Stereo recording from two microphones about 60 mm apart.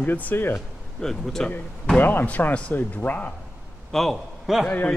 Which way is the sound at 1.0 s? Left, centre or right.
Centre.